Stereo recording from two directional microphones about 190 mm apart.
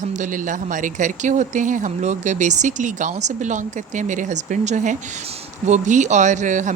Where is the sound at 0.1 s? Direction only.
40° right (ahead or behind).